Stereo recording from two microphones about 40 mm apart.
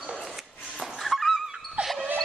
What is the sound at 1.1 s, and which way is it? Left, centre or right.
Dog, centre.